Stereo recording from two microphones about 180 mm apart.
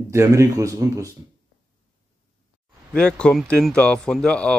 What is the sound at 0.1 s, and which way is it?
Speech, 15° right (ahead or behind).